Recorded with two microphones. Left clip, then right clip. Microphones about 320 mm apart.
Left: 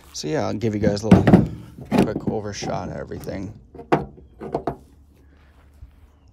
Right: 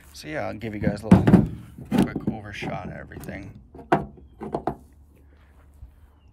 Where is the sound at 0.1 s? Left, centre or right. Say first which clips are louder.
Left 6 dB; centre.